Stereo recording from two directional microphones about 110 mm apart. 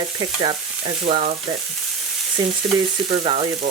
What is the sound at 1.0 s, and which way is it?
Frying, 65° right (ahead or behind).